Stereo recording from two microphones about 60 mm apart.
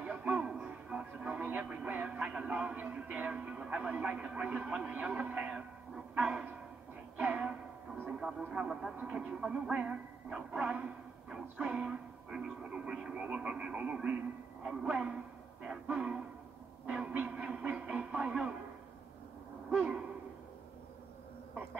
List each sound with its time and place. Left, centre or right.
0.0 s music: right
1.9 s speech: right
7.2 s music: right
8.1 s speech: centre
11.3 s speech: centre
16.8 s a sound: centre
17.9 s music: centre